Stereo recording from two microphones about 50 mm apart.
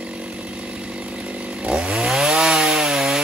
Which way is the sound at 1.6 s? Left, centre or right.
Centre.